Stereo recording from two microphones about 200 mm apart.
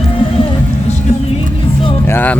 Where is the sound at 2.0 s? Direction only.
10° left (ahead or behind).